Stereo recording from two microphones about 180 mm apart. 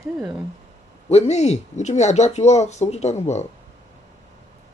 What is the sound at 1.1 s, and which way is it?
Speech, 35° left (ahead or behind).